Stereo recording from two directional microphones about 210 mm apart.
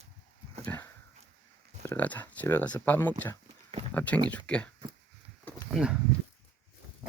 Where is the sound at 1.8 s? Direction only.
10° left (ahead or behind).